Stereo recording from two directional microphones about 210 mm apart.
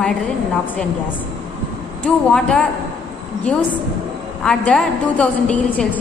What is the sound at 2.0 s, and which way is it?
Speech, 5° left (ahead or behind).